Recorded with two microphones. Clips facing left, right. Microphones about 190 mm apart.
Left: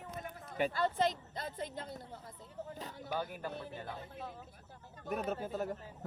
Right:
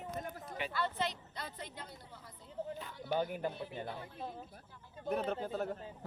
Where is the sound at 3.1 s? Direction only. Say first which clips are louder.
Right 4 dB; 20° right (ahead or behind).